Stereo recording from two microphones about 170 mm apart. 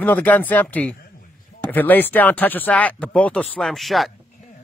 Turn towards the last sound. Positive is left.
turn(degrees=0)  # may be behind; listen again after turning